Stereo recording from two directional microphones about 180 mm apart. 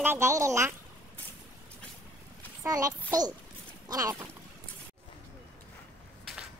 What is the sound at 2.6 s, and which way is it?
A child's voice, 20° right (ahead or behind).